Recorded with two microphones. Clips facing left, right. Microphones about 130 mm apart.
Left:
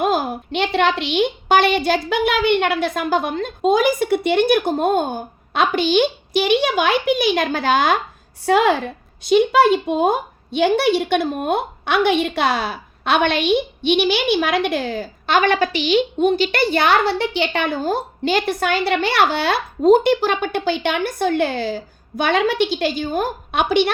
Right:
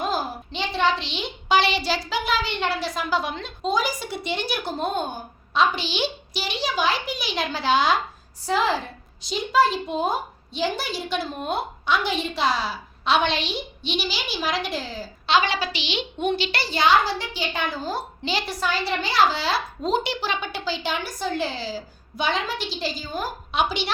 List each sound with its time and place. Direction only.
0.0 s a woman's voice: 60° left (ahead or behind)
8.4 s a woman's voice: 60° left (ahead or behind)